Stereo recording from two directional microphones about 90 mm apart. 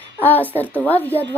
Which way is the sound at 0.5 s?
20° left (ahead or behind).